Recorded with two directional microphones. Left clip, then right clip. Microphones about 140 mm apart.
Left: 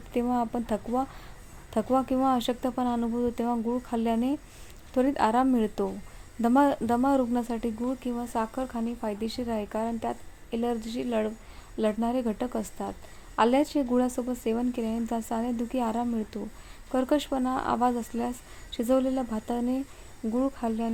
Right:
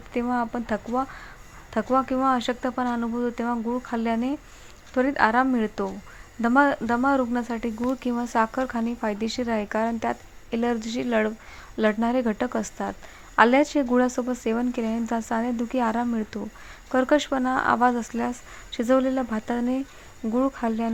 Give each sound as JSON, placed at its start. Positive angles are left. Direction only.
{"t": 0.1, "sound": "a woman's voice", "side_deg": 5}
{"t": 4.0, "sound": "speech", "side_deg": 5}
{"t": 7.9, "sound": "a woman's voice", "side_deg": -25}